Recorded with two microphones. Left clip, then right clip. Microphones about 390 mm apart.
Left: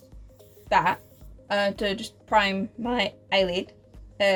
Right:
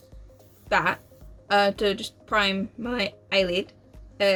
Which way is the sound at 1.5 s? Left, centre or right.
Left.